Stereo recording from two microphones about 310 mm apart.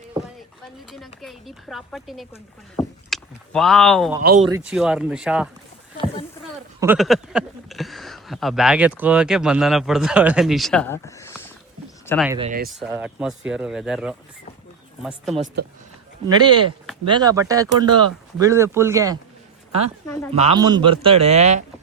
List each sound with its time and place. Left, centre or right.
0.9 s speech: centre
4.2 s a man's voice: right
4.4 s speech: centre
6.7 s speech: centre
12.3 s speech: centre
12.8 s speech: centre
16.2 s speech: centre
20.3 s a man's voice: centre